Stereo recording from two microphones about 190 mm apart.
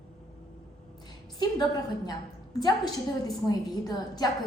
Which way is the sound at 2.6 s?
20° left (ahead or behind).